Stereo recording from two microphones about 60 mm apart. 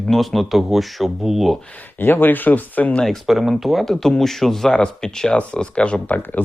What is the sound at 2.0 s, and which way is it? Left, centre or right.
Speech, left.